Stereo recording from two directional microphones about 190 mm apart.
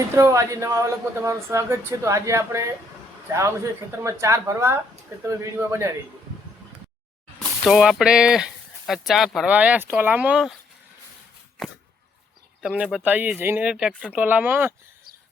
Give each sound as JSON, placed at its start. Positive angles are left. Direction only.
{"t": 0.2, "sound": "speech", "side_deg": -15}
{"t": 4.0, "sound": "speech", "side_deg": -15}
{"t": 7.6, "sound": "speech", "side_deg": 0}
{"t": 12.6, "sound": "speech", "side_deg": -5}